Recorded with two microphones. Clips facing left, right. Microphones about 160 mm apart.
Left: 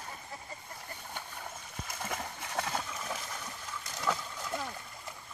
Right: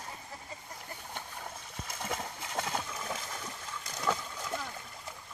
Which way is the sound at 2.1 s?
20° right (ahead or behind).